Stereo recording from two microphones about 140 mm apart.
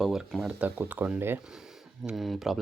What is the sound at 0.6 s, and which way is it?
Speech, 10° right (ahead or behind).